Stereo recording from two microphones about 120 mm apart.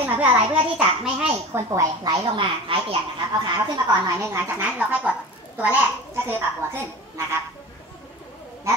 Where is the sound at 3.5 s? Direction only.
35° right (ahead or behind).